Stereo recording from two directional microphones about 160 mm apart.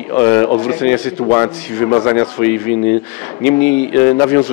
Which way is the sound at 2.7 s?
10° left (ahead or behind).